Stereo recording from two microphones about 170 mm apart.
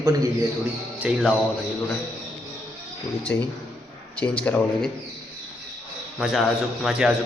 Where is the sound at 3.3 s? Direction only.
15° left (ahead or behind).